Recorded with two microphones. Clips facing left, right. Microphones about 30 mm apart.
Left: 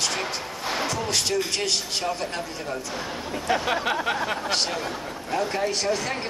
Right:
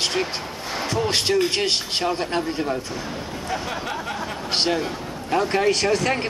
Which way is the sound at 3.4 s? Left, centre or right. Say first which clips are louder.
Left 5 dB; left.